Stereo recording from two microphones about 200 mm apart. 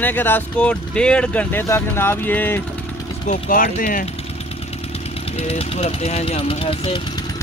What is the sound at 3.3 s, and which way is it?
Speech, 45° left (ahead or behind).